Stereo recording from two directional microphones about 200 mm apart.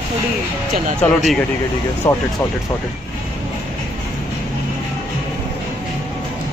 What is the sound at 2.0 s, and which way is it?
Speech, 25° left (ahead or behind).